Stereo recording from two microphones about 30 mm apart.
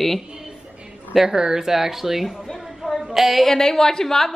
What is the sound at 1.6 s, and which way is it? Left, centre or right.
Speech, centre.